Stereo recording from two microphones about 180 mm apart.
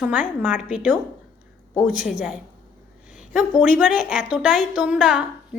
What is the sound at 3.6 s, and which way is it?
A woman's voice, 10° right (ahead or behind).